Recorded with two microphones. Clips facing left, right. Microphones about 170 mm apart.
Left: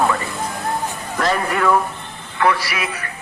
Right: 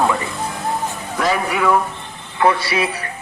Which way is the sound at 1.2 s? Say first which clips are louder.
Even; 5° right (ahead or behind).